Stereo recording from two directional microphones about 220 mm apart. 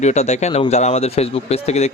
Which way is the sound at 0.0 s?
30° left (ahead or behind).